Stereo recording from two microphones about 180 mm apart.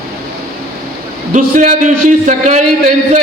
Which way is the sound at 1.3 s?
45° right (ahead or behind).